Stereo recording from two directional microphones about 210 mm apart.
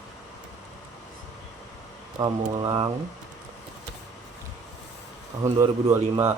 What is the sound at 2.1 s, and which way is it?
Speech, 20° right (ahead or behind).